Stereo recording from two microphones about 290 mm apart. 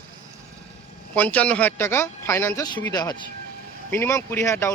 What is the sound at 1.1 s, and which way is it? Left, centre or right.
Speech, centre.